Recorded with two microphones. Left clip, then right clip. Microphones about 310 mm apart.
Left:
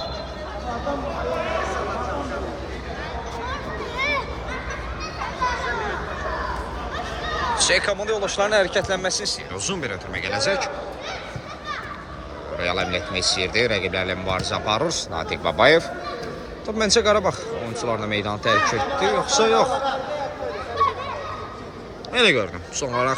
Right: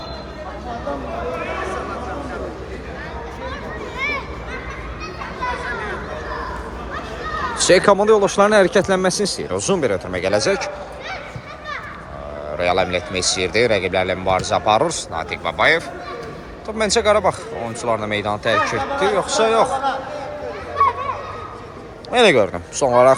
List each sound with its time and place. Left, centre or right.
3.9 s a sound: left
7.6 s speech: centre
9.5 s speech: centre
12.5 s speech: centre
22.1 s speech: centre